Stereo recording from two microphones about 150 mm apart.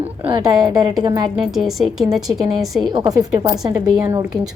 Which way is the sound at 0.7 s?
30° right (ahead or behind).